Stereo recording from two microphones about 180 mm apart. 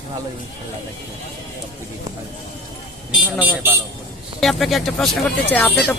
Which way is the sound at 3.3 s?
10° right (ahead or behind).